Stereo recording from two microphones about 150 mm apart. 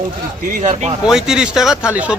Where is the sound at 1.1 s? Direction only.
5° right (ahead or behind).